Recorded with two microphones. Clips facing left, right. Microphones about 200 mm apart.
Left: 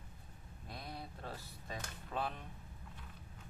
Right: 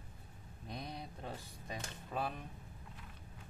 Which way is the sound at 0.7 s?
20° right (ahead or behind).